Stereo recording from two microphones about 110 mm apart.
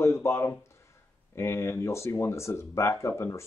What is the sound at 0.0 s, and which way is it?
Speech, 25° left (ahead or behind).